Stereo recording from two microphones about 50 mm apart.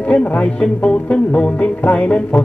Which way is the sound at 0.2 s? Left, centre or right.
Left.